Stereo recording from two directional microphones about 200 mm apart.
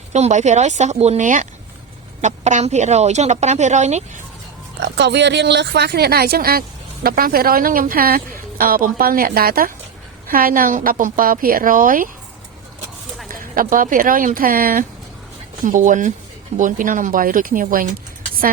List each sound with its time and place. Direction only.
0.1 s a woman's voice: 35° right (ahead or behind)
4.8 s speech: 60° right (ahead or behind); by 12.0 s 45° right (ahead or behind)
13.3 s a woman's voice: 45° right (ahead or behind)